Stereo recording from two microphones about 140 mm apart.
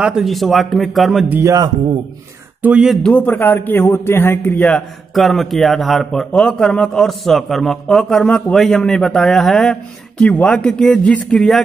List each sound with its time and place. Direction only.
0.0 s a man's voice: 5° right (ahead or behind)
1.3 s a man's voice: 20° right (ahead or behind)
2.6 s speech: 5° right (ahead or behind)
3.0 s a man's voice: 10° left (ahead or behind)
4.6 s a man's voice: centre (ahead or behind)